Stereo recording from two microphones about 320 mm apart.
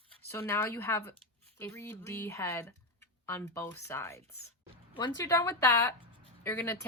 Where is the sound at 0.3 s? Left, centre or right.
Centre.